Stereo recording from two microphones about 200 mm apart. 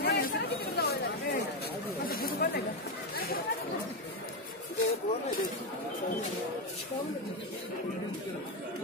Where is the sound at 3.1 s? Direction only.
50° left (ahead or behind).